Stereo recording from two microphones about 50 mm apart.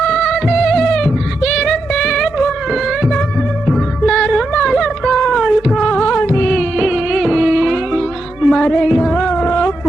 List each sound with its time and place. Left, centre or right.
0.1 s music: centre
3.7 s music: centre
4.3 s a sound: centre
5.4 s cat: centre
6.1 s music: left
6.7 s music: centre
8.4 s music: centre
8.6 s music: centre
9.3 s a sound: left